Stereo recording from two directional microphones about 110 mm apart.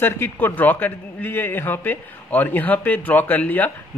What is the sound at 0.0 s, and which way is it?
A man's voice, 20° left (ahead or behind).